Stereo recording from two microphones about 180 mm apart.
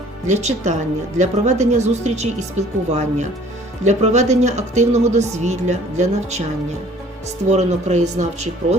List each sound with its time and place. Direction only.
0.3 s a woman's voice: 40° right (ahead or behind)
7.4 s a woman's voice: 40° right (ahead or behind)